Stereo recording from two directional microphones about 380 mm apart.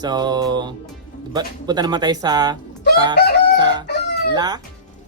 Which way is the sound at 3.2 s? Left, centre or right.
Left.